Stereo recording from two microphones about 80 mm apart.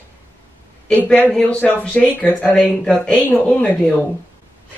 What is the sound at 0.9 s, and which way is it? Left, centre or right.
Speech, centre.